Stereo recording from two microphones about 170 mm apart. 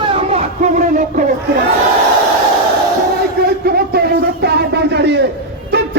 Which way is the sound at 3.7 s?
65° right (ahead or behind).